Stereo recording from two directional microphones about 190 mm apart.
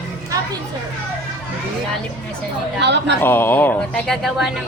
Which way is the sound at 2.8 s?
65° right (ahead or behind).